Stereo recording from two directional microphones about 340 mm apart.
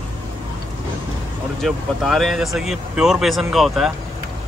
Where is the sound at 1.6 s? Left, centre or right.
Centre.